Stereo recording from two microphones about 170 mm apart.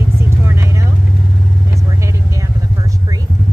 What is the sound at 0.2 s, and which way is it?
Vehicle, 15° right (ahead or behind).